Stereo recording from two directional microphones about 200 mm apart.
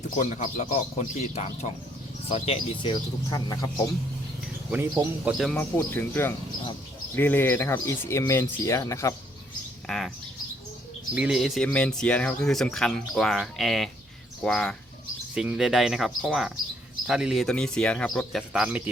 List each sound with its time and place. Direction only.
0.2 s speech: 40° left (ahead or behind)
2.3 s speech: 25° left (ahead or behind)
4.7 s speech: 10° right (ahead or behind)
5.4 s speech: 5° left (ahead or behind)
9.8 s bird: centre (ahead or behind)
11.1 s speech: 5° right (ahead or behind)